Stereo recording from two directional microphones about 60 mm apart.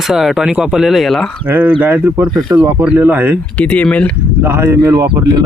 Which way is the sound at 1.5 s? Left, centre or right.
Right.